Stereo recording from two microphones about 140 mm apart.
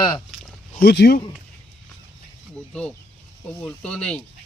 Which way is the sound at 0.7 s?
90° left.